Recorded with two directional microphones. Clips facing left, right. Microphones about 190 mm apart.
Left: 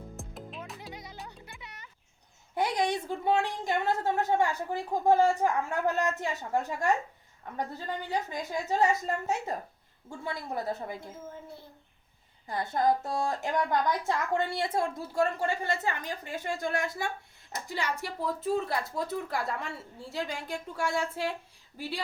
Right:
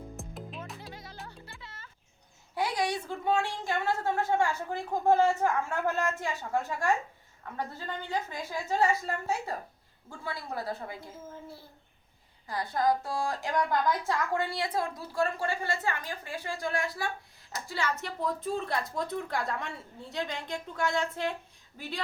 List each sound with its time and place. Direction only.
0.2 s music: centre (ahead or behind)
0.9 s music: 20° left (ahead or behind)
2.6 s a woman's voice: 20° left (ahead or behind)
11.0 s speech: 5° right (ahead or behind)
12.5 s a woman's voice: 25° left (ahead or behind)
17.7 s a woman's voice: 15° left (ahead or behind)